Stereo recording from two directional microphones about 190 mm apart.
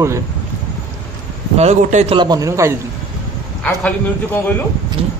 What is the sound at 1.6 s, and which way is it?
Speech, 35° right (ahead or behind).